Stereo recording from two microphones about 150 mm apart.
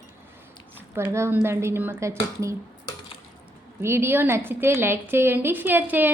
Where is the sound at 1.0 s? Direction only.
15° right (ahead or behind).